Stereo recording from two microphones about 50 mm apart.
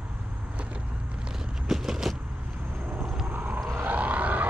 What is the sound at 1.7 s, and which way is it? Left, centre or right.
Vehicle, centre.